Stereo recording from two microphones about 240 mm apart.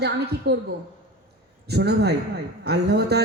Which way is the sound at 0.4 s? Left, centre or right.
Right.